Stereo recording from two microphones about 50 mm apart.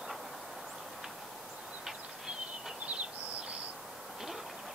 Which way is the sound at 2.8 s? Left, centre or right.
Right.